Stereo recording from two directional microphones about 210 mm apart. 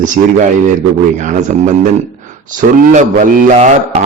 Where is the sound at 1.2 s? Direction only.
35° right (ahead or behind).